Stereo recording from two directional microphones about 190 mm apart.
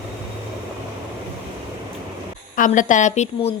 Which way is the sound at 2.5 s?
45° left (ahead or behind).